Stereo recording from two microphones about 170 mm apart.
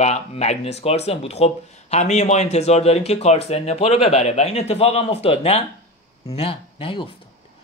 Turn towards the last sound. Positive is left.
turn(degrees=30)  # may be behind; listen again after turning